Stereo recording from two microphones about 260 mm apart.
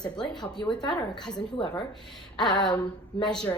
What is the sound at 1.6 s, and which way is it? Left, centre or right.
Speech, centre.